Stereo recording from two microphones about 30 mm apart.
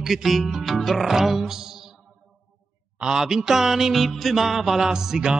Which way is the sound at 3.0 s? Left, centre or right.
Right.